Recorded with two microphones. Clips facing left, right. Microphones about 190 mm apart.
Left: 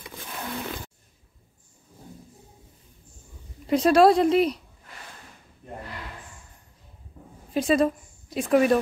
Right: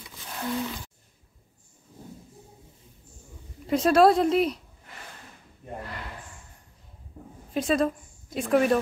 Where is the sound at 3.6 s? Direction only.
Centre (ahead or behind).